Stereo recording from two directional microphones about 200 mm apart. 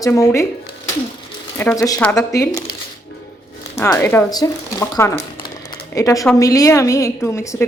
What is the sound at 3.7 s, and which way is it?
A woman's voice, 15° left (ahead or behind).